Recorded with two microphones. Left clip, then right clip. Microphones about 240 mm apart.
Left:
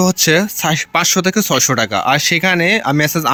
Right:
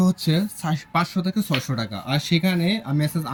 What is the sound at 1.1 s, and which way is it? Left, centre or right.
Speech, left.